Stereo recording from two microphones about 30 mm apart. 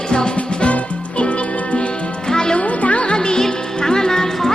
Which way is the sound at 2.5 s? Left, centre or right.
Left.